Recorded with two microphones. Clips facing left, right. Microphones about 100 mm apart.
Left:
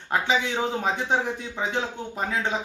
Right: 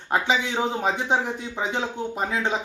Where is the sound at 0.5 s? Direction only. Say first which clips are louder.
Right 1 dB; 15° right (ahead or behind).